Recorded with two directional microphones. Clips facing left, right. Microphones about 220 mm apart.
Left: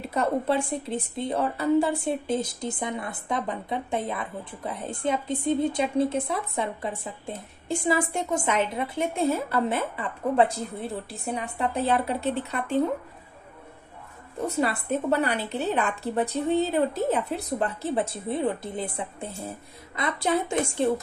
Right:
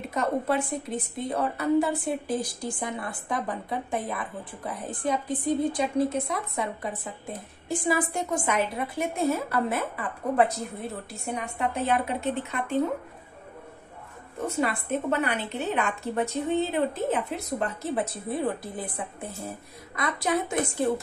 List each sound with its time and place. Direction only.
0.1 s a woman's voice: 30° left (ahead or behind)
14.4 s a woman's voice: 35° left (ahead or behind)